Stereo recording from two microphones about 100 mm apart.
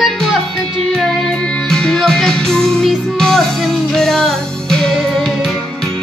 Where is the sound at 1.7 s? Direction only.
5° left (ahead or behind).